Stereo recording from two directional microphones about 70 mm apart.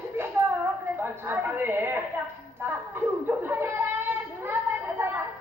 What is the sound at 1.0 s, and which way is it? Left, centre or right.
Speech, right.